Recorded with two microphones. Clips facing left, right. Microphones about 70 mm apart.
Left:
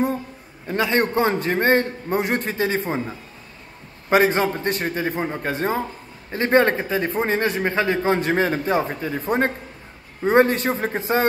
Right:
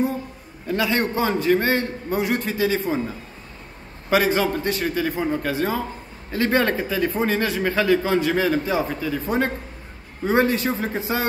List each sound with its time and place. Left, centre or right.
0.7 s a man's voice: left
4.1 s a man's voice: left